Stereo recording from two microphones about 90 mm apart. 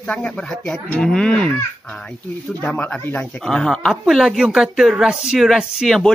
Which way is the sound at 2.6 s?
15° left (ahead or behind).